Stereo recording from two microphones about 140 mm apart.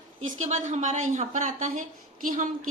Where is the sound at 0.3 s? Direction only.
60° right (ahead or behind).